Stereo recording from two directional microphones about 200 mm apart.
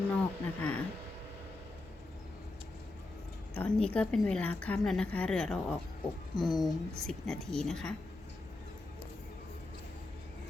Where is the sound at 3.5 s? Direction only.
10° left (ahead or behind).